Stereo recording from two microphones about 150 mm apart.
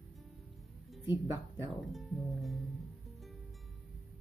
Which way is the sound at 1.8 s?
Centre (ahead or behind).